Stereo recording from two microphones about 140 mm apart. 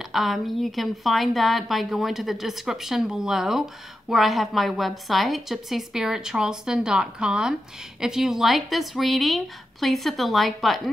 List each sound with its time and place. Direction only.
0.1 s a woman's voice: centre (ahead or behind)